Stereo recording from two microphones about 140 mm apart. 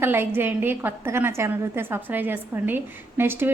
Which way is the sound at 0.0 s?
15° right (ahead or behind).